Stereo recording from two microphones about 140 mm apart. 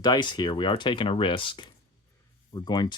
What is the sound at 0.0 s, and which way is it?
Speech, 30° left (ahead or behind).